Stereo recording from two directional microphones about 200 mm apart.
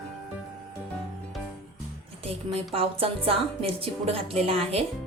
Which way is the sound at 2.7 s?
30° right (ahead or behind).